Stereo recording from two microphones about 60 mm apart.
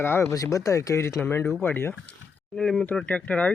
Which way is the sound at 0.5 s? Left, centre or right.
Left.